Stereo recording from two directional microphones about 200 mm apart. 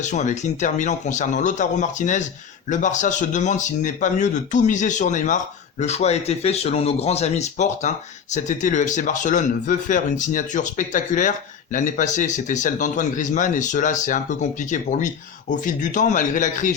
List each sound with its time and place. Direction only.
0.0 s speech: 35° left (ahead or behind)